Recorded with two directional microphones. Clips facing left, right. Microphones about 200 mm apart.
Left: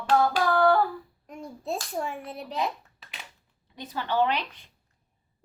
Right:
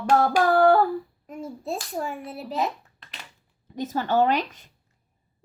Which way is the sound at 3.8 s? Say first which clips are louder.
Right 4 dB; 45° right (ahead or behind).